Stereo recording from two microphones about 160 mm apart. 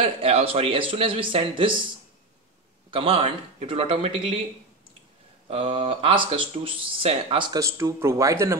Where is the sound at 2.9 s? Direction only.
35° right (ahead or behind).